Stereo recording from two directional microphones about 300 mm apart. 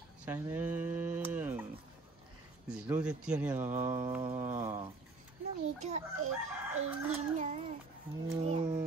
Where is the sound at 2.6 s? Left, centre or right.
Centre.